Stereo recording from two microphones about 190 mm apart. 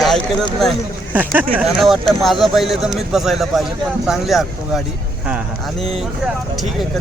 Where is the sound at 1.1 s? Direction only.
10° right (ahead or behind).